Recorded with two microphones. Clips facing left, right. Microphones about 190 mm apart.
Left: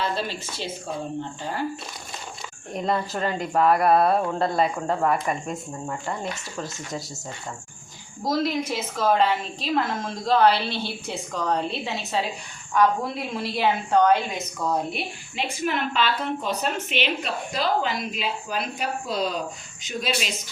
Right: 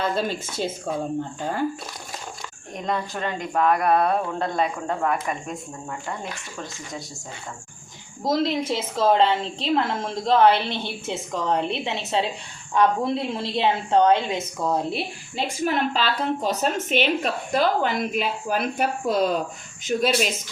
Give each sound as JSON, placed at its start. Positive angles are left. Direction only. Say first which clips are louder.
{"t": 0.0, "sound": "a woman's voice", "louder": "right 3 dB", "side_deg": -50}
{"t": 2.7, "sound": "speech", "louder": "left 2 dB", "side_deg": 5}
{"t": 8.2, "sound": "a woman's voice", "louder": "right 2 dB", "side_deg": -25}